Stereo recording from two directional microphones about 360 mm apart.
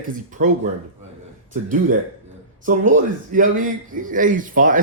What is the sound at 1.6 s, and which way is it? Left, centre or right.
A man's voice, right.